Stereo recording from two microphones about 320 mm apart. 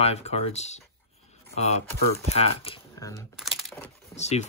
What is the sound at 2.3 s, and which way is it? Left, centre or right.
Speech, centre.